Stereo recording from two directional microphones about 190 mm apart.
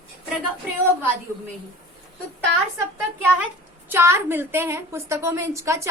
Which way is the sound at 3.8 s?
10° right (ahead or behind).